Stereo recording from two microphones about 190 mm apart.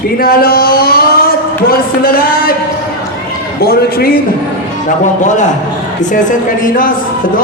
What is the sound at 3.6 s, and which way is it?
Speech, 55° left (ahead or behind).